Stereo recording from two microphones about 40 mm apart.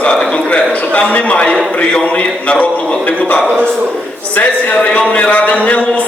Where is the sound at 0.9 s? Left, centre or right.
Left.